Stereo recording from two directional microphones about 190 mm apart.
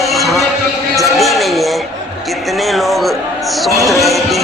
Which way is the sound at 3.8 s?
Centre (ahead or behind).